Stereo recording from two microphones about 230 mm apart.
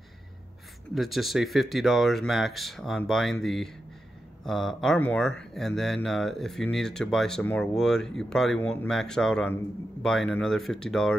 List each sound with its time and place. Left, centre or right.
0.9 s speech: centre